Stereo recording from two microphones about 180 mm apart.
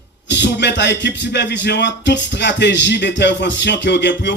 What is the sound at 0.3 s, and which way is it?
Speech, 75° left (ahead or behind).